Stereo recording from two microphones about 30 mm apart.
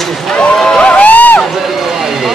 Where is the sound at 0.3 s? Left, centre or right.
Left.